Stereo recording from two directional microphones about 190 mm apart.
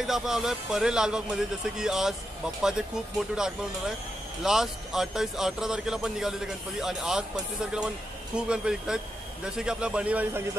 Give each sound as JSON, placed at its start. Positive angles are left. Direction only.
{"t": 0.0, "sound": "speech", "side_deg": 0}